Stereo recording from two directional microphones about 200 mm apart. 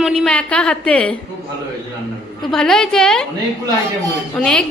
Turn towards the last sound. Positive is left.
turn(degrees=5)  # may be behind; listen again after turning